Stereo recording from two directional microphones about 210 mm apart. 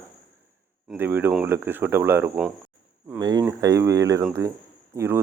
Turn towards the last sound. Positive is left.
turn(degrees=-10)  # may be behind; listen again after turning